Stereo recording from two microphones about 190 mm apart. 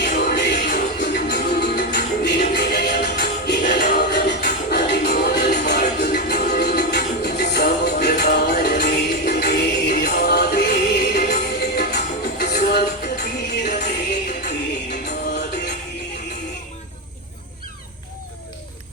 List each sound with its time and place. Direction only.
0.0 s music: 60° left (ahead or behind)